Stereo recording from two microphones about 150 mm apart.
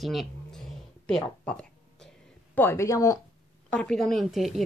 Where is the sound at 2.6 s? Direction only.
15° left (ahead or behind).